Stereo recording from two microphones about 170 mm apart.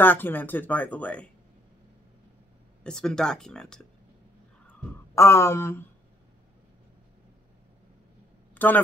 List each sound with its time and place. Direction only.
0.0 s speech: 10° left (ahead or behind)
2.8 s speech: 5° left (ahead or behind)
4.6 s speech: 15° left (ahead or behind)
8.5 s speech: 10° left (ahead or behind)